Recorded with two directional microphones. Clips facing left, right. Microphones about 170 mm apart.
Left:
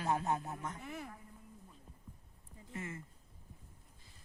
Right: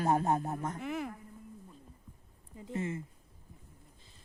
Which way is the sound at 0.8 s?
90° right.